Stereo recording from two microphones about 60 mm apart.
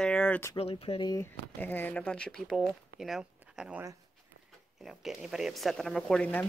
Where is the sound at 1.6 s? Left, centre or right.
Left.